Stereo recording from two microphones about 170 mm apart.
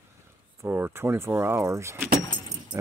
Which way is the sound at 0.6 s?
10° right (ahead or behind).